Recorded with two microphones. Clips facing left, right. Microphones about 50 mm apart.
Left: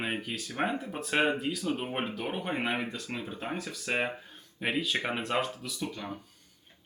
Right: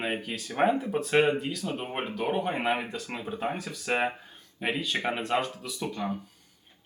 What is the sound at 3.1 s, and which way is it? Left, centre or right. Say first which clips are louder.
Speech: right 4 dB; centre.